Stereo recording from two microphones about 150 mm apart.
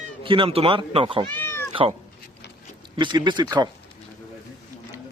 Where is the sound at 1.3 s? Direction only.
15° left (ahead or behind).